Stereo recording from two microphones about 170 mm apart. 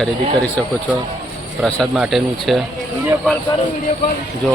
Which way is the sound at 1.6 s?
Centre (ahead or behind).